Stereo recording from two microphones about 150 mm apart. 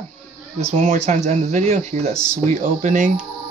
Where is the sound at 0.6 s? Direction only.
50° right (ahead or behind).